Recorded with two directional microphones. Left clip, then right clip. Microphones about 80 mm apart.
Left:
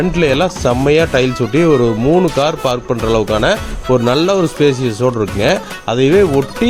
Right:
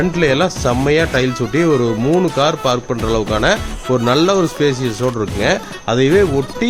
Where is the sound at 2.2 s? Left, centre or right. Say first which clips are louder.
Left 1 dB; left.